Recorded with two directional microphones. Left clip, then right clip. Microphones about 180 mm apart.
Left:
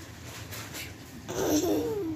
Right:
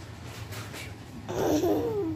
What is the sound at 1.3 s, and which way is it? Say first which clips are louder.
Babbling: right 1 dB; centre (ahead or behind).